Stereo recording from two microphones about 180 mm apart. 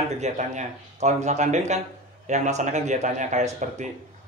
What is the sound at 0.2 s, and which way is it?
Speech, 40° right (ahead or behind).